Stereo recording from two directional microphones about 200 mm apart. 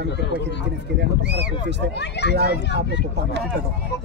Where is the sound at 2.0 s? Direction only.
55° left (ahead or behind).